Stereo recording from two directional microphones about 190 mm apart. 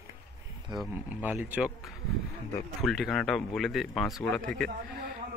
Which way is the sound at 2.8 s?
Centre (ahead or behind).